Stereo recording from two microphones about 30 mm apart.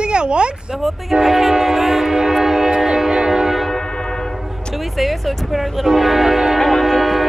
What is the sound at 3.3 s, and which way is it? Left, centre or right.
Music, centre.